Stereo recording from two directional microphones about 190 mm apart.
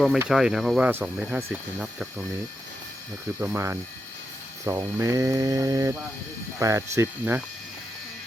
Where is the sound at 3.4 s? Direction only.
15° right (ahead or behind).